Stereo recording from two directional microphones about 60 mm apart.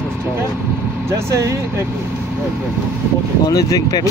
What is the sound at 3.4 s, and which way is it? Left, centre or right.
Speech, left.